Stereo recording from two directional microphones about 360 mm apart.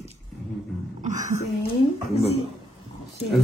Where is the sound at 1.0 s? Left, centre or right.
Right.